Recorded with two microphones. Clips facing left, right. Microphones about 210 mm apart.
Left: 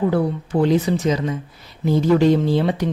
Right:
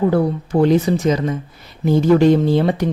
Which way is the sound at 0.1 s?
45° right (ahead or behind).